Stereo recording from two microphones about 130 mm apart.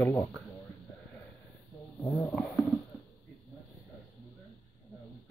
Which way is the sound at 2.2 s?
5° left (ahead or behind).